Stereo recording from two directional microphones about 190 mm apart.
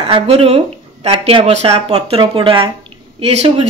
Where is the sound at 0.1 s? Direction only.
30° right (ahead or behind).